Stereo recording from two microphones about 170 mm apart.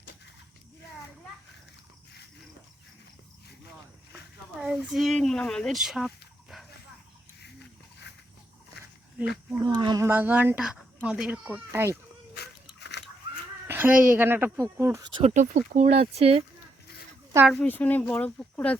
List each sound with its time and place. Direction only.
4.5 s speech: 5° right (ahead or behind)
8.1 s a sound: 80° left
9.2 s speech: 5° right (ahead or behind)
9.6 s speech: 25° right (ahead or behind)
10.1 s speech: 10° right (ahead or behind)
12.4 s a sound: 85° left
13.7 s a sound: 10° right (ahead or behind)
14.2 s speech: 10° right (ahead or behind)
15.1 s speech: 45° right (ahead or behind)
17.5 s speech: 10° left (ahead or behind)